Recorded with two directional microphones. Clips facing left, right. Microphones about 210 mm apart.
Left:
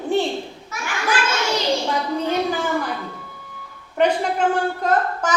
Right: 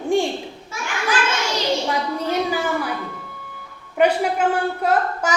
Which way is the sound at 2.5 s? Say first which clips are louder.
Even; 10° right (ahead or behind).